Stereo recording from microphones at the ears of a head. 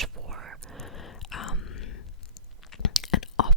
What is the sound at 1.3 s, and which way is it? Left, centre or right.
Whispering, left.